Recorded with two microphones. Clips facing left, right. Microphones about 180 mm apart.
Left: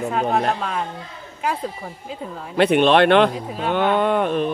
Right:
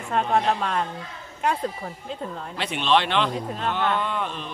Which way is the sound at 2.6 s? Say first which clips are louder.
Left 9 dB; 55° left (ahead or behind).